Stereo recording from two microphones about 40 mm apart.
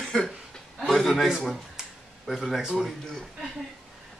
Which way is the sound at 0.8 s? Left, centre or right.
Centre.